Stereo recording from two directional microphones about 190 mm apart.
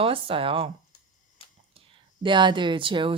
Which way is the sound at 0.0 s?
30° right (ahead or behind).